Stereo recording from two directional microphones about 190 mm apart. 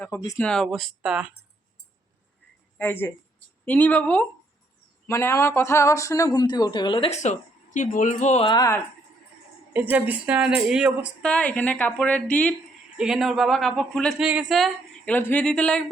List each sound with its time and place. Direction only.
0.0 s speech: 10° left (ahead or behind)
2.7 s a woman's voice: 10° left (ahead or behind); by 8.4 s 35° left (ahead or behind)
8.4 s speech: 20° left (ahead or behind)
9.7 s speech: 10° right (ahead or behind)